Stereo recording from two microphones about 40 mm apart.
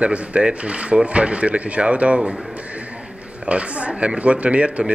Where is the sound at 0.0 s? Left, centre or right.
Right.